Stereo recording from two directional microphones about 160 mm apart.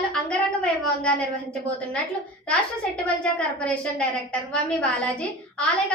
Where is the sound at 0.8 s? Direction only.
5° left (ahead or behind).